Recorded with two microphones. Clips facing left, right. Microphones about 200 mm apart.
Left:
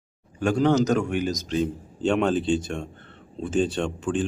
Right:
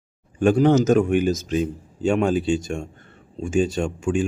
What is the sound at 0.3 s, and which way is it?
Speech, 15° right (ahead or behind).